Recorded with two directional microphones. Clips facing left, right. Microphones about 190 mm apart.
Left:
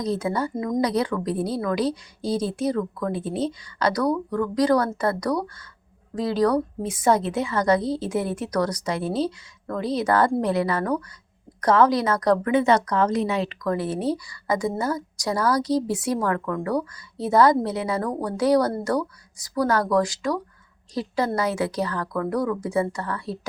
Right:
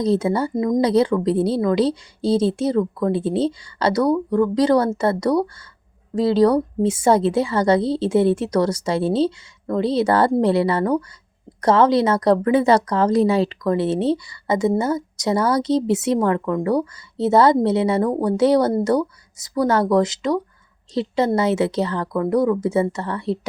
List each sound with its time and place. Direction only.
0.0 s a woman's voice: 25° right (ahead or behind)